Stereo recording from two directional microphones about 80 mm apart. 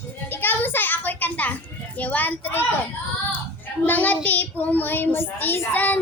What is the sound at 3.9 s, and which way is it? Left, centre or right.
A child's voice, left.